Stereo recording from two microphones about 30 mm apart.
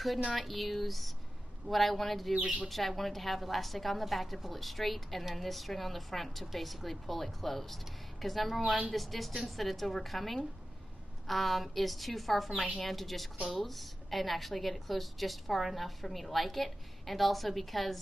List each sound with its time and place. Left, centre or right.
0.4 s a woman's voice: centre